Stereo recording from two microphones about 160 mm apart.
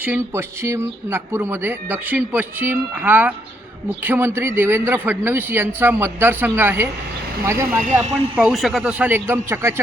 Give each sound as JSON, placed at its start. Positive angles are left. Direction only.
{"t": 0.0, "sound": "speech", "side_deg": -15}
{"t": 8.4, "sound": "speech", "side_deg": 0}